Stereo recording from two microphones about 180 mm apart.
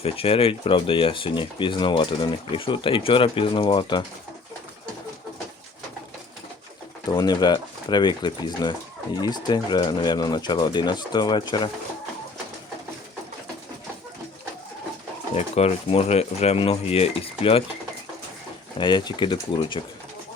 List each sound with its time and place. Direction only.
0.0 s speech: 30° left (ahead or behind)
7.1 s speech: 25° left (ahead or behind)
15.4 s speech: 35° left (ahead or behind)
18.8 s speech: 25° left (ahead or behind)